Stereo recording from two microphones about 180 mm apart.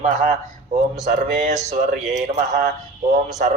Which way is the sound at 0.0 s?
40° right (ahead or behind).